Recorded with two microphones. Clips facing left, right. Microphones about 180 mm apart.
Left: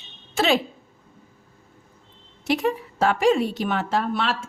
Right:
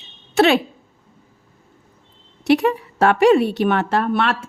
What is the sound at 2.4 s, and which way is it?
A woman's voice, 70° right (ahead or behind).